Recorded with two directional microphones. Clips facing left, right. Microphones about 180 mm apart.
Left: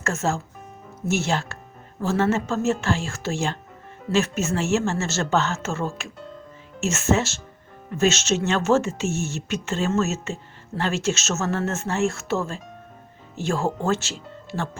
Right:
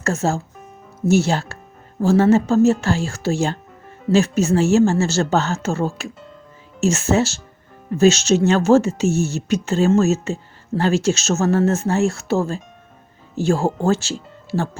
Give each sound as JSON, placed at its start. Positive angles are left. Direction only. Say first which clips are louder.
{"t": 0.0, "sound": "speech", "louder": "right 4 dB", "side_deg": -35}